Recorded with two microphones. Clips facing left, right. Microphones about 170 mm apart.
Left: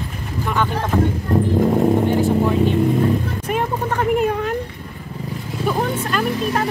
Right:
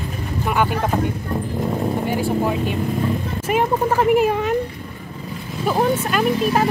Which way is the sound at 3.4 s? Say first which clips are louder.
Right 3 dB; 5° right (ahead or behind).